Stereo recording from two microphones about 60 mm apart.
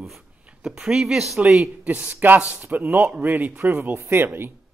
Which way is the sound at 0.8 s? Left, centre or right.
Centre.